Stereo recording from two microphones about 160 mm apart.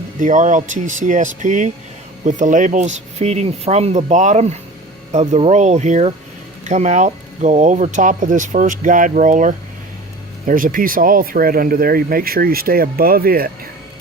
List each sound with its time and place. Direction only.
0.2 s speech: 50° right (ahead or behind); by 13.5 s 70° right (ahead or behind)